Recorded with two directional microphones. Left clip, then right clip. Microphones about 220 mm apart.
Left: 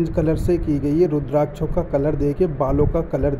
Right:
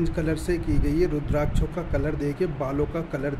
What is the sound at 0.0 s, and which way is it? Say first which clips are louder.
Speech: left 6 dB; 20° left (ahead or behind).